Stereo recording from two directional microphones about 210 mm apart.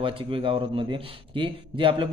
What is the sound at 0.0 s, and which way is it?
A man's voice, 25° right (ahead or behind).